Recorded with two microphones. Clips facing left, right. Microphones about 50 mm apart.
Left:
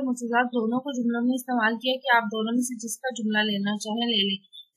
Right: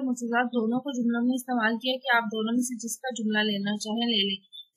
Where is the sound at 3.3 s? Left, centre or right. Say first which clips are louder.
Left 2 dB; centre.